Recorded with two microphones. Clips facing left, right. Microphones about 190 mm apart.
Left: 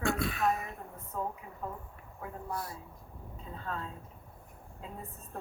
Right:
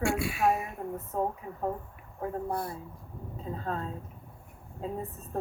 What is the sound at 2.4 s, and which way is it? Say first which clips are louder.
Speech: right 6 dB; 55° right (ahead or behind).